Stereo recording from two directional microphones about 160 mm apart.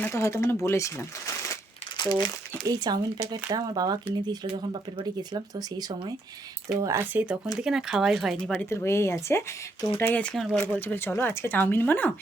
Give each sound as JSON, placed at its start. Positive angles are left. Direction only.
{"t": 0.0, "sound": "speech", "side_deg": 15}
{"t": 2.0, "sound": "speech", "side_deg": 25}
{"t": 2.5, "sound": "speech", "side_deg": -25}
{"t": 6.8, "sound": "speech", "side_deg": -15}
{"t": 8.7, "sound": "speech", "side_deg": 15}
{"t": 10.8, "sound": "speech", "side_deg": 10}